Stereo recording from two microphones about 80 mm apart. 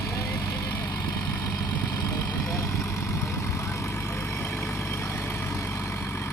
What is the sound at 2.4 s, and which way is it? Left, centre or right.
Vehicle, left.